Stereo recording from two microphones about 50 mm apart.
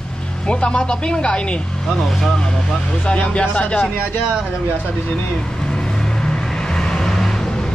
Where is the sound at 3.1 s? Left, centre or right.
Left.